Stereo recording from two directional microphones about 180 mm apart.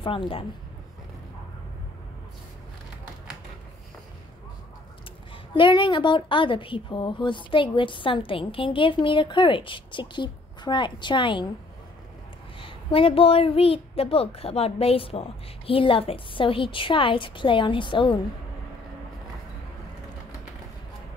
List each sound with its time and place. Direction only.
0.0 s a woman's voice: 30° left (ahead or behind)
5.5 s a woman's voice: 25° left (ahead or behind)
12.5 s a woman's voice: 30° left (ahead or behind)